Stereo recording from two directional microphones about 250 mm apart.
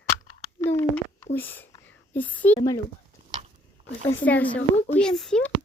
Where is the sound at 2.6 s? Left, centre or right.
Centre.